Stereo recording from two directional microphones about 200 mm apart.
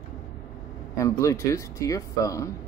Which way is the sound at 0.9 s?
15° left (ahead or behind).